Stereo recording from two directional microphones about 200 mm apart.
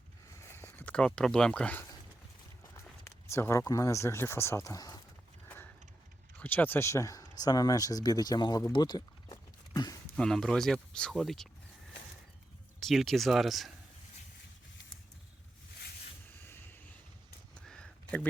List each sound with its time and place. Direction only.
0.3 s a sound: 10° left (ahead or behind)
2.8 s speech: 10° left (ahead or behind)
5.5 s horse: 10° left (ahead or behind)
6.4 s speech: 10° left (ahead or behind)
10.2 s speech: 5° left (ahead or behind)
12.8 s speech: centre (ahead or behind)
16.4 s vehicle: 10° left (ahead or behind)
17.5 s a sound: 5° left (ahead or behind)